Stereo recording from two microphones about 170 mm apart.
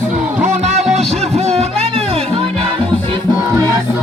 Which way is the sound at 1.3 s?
40° right (ahead or behind).